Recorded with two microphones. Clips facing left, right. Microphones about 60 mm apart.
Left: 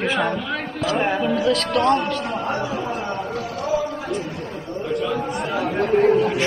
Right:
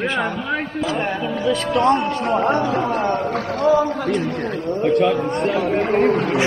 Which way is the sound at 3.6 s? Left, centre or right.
Right.